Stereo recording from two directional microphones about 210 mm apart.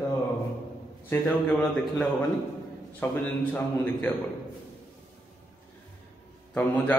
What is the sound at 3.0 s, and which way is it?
A man's voice, 10° left (ahead or behind).